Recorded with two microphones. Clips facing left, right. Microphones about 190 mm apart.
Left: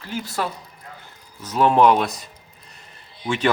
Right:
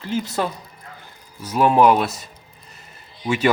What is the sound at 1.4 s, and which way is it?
Speech, 10° right (ahead or behind).